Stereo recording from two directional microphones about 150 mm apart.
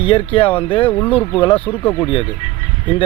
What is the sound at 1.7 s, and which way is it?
Speech, 10° left (ahead or behind).